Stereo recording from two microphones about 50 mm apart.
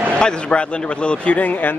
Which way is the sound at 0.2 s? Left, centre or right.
Centre.